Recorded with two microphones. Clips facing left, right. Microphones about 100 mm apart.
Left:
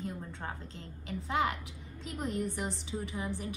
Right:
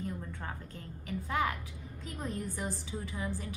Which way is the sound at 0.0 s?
25° left (ahead or behind).